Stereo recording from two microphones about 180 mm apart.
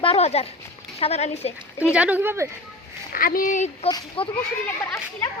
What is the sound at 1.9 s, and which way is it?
Speech, 5° right (ahead or behind).